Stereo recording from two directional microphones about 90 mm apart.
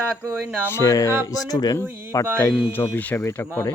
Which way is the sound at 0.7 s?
35° left (ahead or behind).